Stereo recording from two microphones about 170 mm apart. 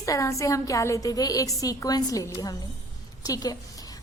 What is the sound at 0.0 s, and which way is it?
A woman's voice, 20° left (ahead or behind).